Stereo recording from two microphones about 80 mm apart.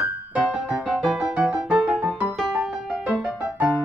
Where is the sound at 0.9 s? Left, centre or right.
Centre.